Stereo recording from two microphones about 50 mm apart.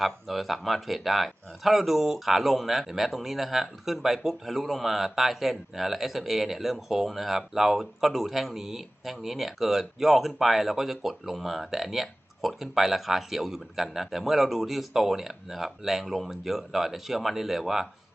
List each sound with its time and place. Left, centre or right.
0.0 s speech: centre